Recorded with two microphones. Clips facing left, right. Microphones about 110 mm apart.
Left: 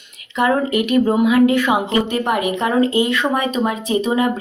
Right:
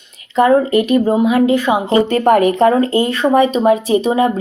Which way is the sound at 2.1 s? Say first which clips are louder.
Right 7 dB; 45° right (ahead or behind).